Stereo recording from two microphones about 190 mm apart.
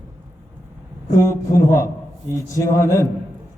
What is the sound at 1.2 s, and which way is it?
A man's voice, 15° left (ahead or behind).